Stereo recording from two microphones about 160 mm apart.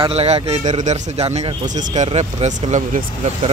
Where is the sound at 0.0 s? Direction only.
40° right (ahead or behind).